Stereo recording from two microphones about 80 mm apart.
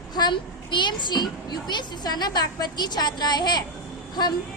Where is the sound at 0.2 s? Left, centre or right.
Left.